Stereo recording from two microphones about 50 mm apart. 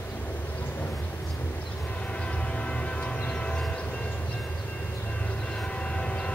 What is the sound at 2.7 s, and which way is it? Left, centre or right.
Train, left.